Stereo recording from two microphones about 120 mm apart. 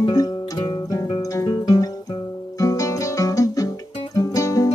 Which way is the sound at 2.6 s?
30° left (ahead or behind).